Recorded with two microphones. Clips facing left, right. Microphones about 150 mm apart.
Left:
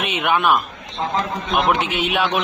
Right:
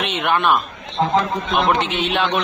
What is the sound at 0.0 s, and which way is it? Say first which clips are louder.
A man's voice: even; 5° left (ahead or behind).